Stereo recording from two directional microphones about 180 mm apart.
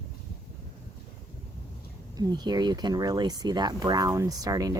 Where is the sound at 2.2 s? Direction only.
25° right (ahead or behind).